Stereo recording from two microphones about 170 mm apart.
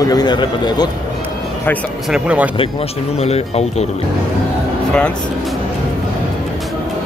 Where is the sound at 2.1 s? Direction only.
5° right (ahead or behind).